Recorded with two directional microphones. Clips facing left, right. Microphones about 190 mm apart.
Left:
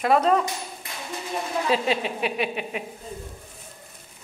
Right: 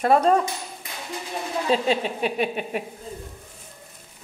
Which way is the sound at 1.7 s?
5° left (ahead or behind).